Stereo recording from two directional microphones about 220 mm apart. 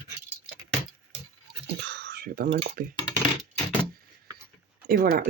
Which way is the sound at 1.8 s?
50° right (ahead or behind).